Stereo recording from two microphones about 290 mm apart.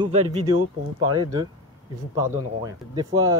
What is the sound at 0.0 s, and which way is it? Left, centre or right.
Speech, right.